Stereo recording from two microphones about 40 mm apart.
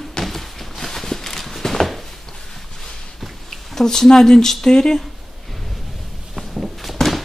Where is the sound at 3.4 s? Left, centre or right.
Centre.